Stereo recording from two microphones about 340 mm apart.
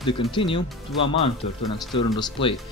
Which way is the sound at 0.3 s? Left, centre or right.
Centre.